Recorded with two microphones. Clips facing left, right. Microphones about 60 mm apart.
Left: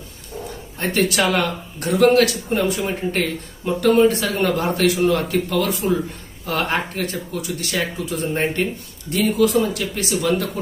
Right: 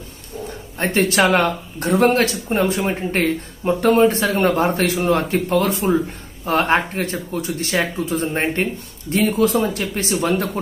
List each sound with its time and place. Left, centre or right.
0.7 s speech: right